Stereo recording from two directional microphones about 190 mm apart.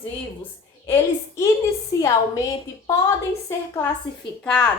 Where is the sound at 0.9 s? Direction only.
15° left (ahead or behind).